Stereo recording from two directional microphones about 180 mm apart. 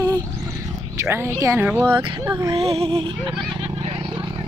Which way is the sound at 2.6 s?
35° right (ahead or behind).